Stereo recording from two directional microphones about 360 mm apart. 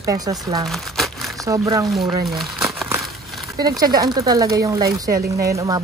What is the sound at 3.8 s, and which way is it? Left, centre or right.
Speech, centre.